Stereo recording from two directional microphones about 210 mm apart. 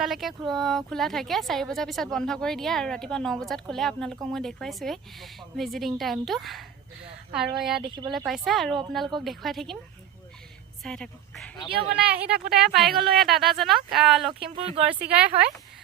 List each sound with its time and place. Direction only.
0.0 s speech: centre (ahead or behind)
10.8 s a woman's voice: 5° left (ahead or behind)
12.1 s speech: 5° right (ahead or behind)
14.5 s speech: 25° right (ahead or behind)
14.9 s speech: 5° right (ahead or behind)